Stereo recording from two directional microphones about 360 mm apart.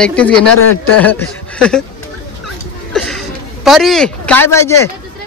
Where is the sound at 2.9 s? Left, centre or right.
Centre.